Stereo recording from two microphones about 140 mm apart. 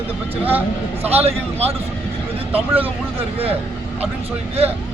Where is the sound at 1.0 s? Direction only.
45° right (ahead or behind).